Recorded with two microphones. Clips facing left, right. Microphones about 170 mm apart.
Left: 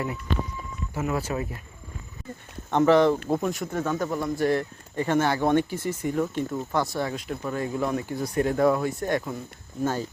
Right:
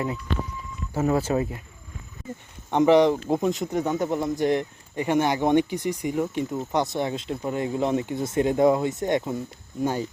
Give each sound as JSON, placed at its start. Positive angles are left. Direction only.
{"t": 0.9, "sound": "speech", "side_deg": -30}
{"t": 2.6, "sound": "speech", "side_deg": -15}